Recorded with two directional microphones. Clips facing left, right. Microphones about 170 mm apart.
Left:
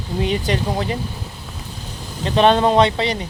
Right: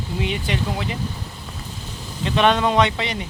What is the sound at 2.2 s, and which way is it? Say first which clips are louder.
Speech: left 4 dB; 35° left (ahead or behind).